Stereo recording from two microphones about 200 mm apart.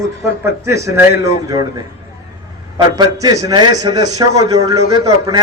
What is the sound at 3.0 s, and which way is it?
A man's voice, 20° right (ahead or behind).